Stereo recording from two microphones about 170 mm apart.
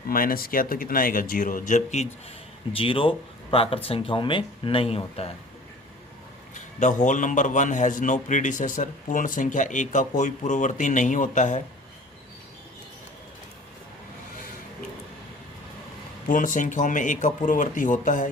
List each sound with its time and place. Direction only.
0.1 s speech: 55° left (ahead or behind)
2.7 s speech: 30° left (ahead or behind)
6.5 s a man's voice: 45° left (ahead or behind)
16.3 s a man's voice: 50° left (ahead or behind)